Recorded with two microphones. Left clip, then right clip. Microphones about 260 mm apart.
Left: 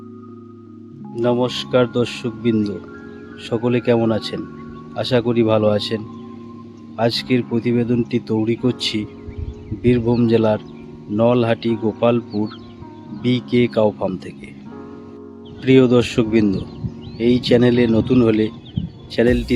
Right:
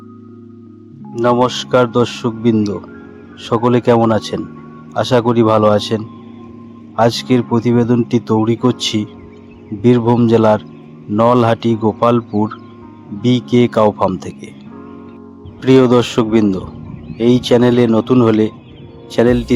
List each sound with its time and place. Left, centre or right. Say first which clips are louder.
1.2 s speech: right 6 dB; centre
15.6 s speech: right 3 dB; centre